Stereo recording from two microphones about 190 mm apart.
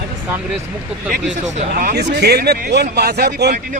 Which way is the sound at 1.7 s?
55° right (ahead or behind).